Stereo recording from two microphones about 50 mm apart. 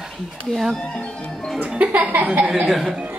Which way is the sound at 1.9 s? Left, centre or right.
Right.